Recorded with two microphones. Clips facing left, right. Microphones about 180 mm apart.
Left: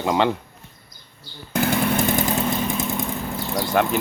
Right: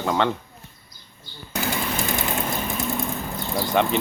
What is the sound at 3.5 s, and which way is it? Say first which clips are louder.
Speech: left 1 dB; 5° left (ahead or behind).